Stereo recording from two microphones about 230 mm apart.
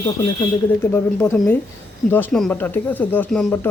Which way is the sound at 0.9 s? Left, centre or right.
Centre.